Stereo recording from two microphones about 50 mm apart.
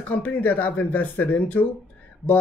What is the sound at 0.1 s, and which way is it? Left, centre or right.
Speech, left.